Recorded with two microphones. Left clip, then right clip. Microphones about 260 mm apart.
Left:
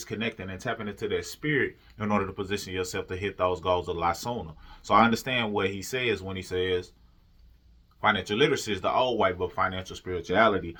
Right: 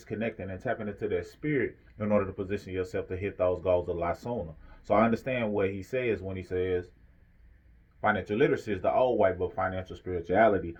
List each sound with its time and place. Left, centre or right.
0.0 s speech: centre
8.0 s speech: centre